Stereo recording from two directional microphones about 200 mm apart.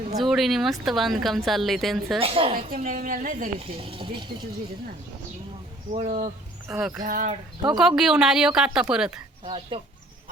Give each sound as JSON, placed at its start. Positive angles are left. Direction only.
{"t": 0.2, "sound": "speech", "side_deg": 0}
{"t": 2.2, "sound": "speech", "side_deg": -30}
{"t": 2.7, "sound": "a woman's voice", "side_deg": -45}
{"t": 3.6, "sound": "speech", "side_deg": -25}
{"t": 5.9, "sound": "speech", "side_deg": -35}
{"t": 6.7, "sound": "speech", "side_deg": -5}
{"t": 7.0, "sound": "speech", "side_deg": -40}
{"t": 7.7, "sound": "speech", "side_deg": 0}
{"t": 9.5, "sound": "speech", "side_deg": -25}